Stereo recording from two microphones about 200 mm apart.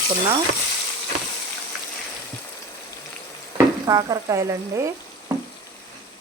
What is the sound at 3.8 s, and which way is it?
Speech, 20° right (ahead or behind).